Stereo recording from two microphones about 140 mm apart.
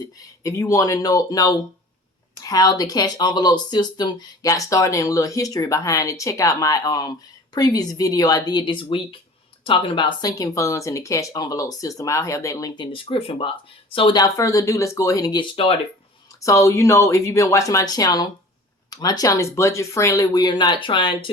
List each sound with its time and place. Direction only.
0.2 s speech: 25° left (ahead or behind); by 14.2 s 40° left (ahead or behind)
14.3 s speech: 25° left (ahead or behind)